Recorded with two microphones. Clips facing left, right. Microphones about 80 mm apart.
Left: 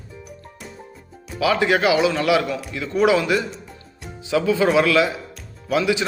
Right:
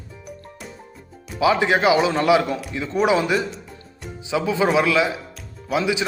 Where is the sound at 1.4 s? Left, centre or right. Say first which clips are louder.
Right 1 dB; right.